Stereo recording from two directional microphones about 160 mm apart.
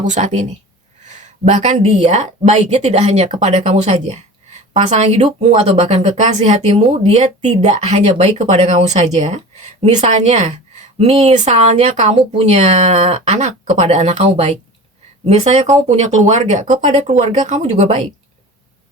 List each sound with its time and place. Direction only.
0.0 s speech: 50° right (ahead or behind)